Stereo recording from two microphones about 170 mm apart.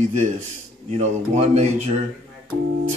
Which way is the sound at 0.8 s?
40° right (ahead or behind).